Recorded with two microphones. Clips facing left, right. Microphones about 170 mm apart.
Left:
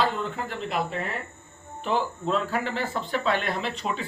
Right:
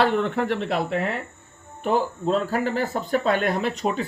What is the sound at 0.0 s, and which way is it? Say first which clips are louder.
Speech: right 6 dB; 70° right (ahead or behind).